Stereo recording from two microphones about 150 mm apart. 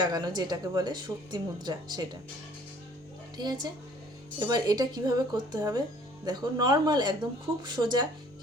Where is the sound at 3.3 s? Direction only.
30° right (ahead or behind).